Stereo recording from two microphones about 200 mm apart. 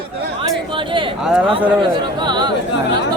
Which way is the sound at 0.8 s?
25° right (ahead or behind).